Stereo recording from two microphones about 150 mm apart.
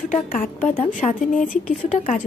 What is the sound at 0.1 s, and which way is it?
A woman's voice, 55° left (ahead or behind).